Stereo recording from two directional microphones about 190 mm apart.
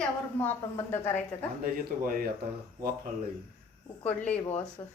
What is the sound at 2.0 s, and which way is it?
Speech, 50° right (ahead or behind).